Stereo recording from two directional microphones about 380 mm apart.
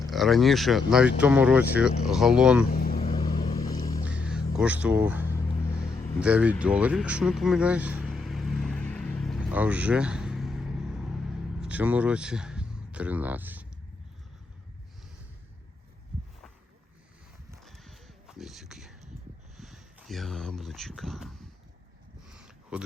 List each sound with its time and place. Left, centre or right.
0.0 s speech: centre
2.7 s vehicle: left
4.0 s music: centre
5.9 s vehicle: centre
17.5 s a sound: centre